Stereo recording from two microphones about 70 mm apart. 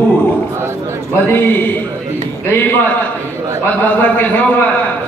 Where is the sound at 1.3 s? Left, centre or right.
Left.